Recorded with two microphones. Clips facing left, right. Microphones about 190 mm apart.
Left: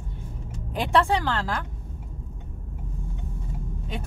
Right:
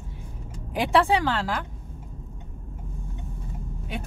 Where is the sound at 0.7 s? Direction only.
10° right (ahead or behind).